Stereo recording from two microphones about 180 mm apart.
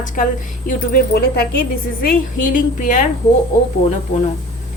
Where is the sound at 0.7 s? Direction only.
60° left (ahead or behind).